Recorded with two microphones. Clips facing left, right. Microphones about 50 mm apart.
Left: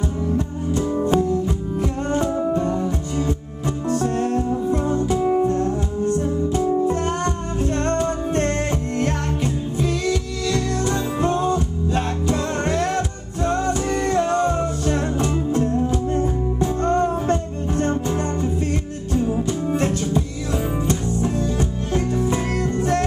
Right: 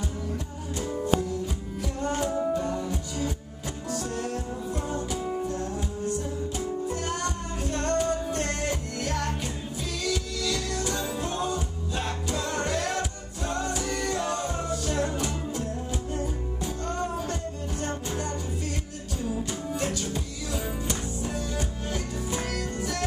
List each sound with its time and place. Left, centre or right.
0.7 s music: left